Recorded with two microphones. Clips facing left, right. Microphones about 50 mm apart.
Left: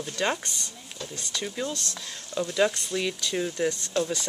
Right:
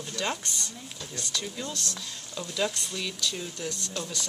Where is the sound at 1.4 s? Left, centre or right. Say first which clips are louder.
Left 4 dB; left.